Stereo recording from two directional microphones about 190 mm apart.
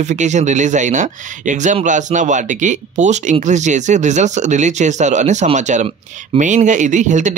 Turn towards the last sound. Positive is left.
turn(degrees=-40)  # may be behind; listen again after turning